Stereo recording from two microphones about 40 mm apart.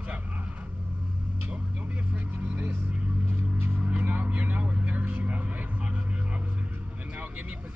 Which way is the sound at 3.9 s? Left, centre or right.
Right.